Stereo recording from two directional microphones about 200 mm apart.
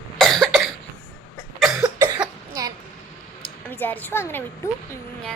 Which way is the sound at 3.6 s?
10° left (ahead or behind).